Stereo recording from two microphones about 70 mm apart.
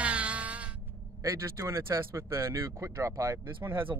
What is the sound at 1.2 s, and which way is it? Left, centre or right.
Speech, right.